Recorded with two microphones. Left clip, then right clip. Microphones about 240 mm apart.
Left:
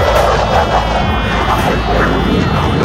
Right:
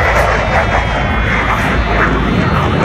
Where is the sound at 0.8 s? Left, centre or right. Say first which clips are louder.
Left 1 dB; left.